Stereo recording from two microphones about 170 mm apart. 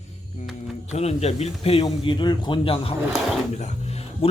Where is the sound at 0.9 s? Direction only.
40° left (ahead or behind).